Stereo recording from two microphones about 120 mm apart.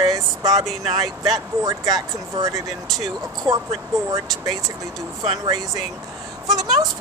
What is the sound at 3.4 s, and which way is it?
Speech, 50° right (ahead or behind).